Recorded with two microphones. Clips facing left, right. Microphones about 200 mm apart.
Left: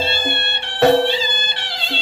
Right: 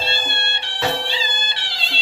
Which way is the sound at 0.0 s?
55° left (ahead or behind).